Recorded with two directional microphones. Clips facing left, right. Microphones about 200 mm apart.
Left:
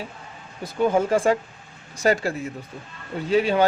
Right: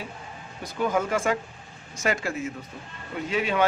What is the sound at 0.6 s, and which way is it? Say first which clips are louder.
Speech: left 5 dB; 30° left (ahead or behind).